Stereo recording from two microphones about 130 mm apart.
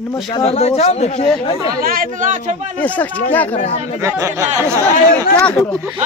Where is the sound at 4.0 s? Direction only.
20° right (ahead or behind).